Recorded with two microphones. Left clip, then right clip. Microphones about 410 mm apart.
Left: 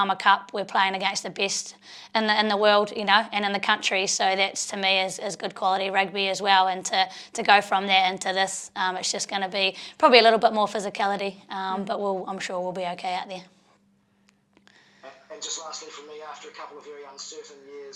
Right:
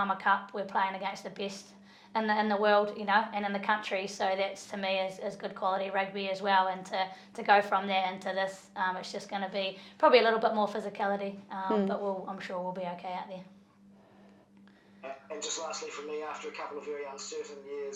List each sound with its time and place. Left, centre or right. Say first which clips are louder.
0.0 s a woman's voice: left 8 dB; left